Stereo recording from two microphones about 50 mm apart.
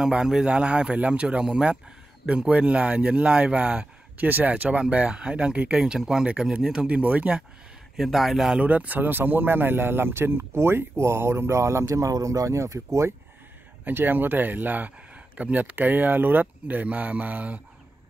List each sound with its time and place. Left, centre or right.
0.1 s speech: centre
4.3 s speech: right
4.6 s speech: right
7.0 s speech: right
8.0 s a man's voice: centre
8.5 s speech: right
13.8 s speech: right